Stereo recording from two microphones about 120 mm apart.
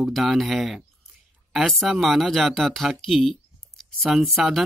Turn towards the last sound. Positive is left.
turn(degrees=0)  # may be behind; listen again after turning